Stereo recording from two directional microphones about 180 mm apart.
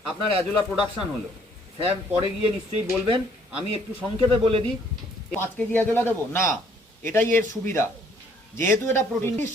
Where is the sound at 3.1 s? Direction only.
30° right (ahead or behind).